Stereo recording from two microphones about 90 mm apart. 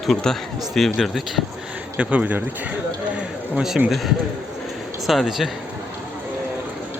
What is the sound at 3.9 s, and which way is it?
Speech, centre (ahead or behind).